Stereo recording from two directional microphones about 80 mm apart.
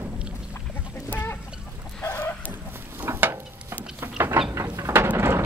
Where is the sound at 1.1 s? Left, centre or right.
Left.